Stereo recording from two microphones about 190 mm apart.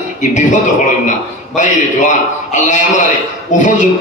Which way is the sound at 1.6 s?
40° left (ahead or behind).